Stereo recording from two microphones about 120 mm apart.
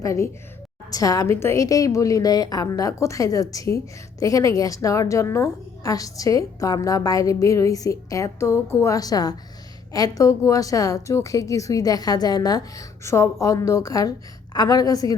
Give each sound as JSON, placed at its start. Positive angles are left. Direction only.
{"t": 0.0, "sound": "a woman's voice", "side_deg": 25}